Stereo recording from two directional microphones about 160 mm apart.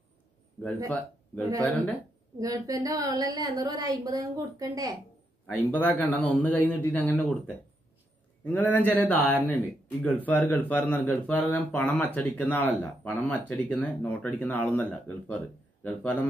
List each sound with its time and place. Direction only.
1.6 s speech: 10° left (ahead or behind)
2.3 s a woman's voice: 20° right (ahead or behind)
5.5 s speech: 10° left (ahead or behind)